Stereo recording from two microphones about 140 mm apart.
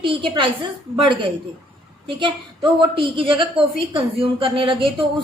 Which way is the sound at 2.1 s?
35° right (ahead or behind).